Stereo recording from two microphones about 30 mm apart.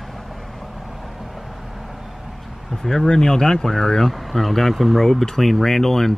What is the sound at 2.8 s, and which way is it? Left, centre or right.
Speech, centre.